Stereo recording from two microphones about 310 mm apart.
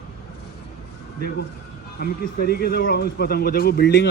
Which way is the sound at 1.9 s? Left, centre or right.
Left.